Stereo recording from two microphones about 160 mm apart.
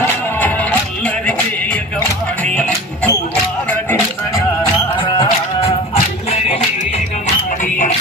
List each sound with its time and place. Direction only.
0.3 s music: 10° left (ahead or behind)
4.9 s music: 30° left (ahead or behind)